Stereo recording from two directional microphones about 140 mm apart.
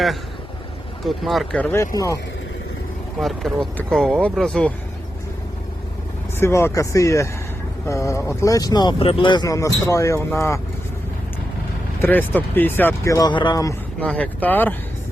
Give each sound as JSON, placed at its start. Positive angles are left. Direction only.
{"t": 1.0, "sound": "speech", "side_deg": 0}
{"t": 1.5, "sound": "speech", "side_deg": 15}
{"t": 3.2, "sound": "speech", "side_deg": 0}
{"t": 6.4, "sound": "speech", "side_deg": 20}
{"t": 9.0, "sound": "speech", "side_deg": 40}
{"t": 12.0, "sound": "speech", "side_deg": 15}
{"t": 14.0, "sound": "speech", "side_deg": 10}